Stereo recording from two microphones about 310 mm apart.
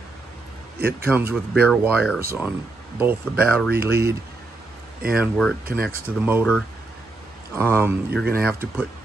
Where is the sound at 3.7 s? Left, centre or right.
Right.